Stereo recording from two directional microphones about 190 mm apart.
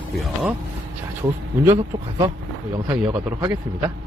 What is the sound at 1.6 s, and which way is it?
Speech, 15° right (ahead or behind).